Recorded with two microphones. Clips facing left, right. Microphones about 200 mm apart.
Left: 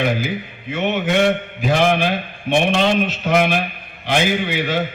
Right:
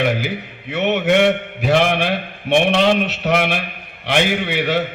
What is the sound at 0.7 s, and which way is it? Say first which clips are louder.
A man's voice: right 3 dB; 70° right (ahead or behind).